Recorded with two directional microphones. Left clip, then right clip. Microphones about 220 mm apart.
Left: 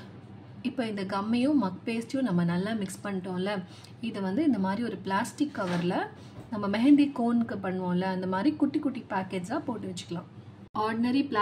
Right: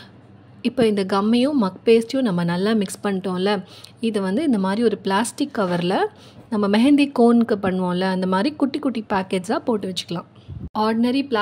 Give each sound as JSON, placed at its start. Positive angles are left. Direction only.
{"t": 0.6, "sound": "a woman's voice", "side_deg": -40}